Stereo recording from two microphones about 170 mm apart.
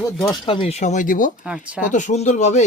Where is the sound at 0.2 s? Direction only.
25° left (ahead or behind); by 1.3 s 50° left (ahead or behind).